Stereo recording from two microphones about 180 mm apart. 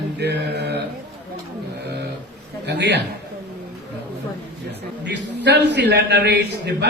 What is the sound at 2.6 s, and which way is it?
Speech, 70° right (ahead or behind).